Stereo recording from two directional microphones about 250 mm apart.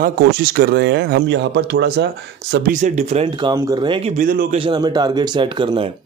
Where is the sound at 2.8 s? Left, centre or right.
Right.